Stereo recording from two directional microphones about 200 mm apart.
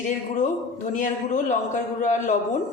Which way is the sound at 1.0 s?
40° left (ahead or behind).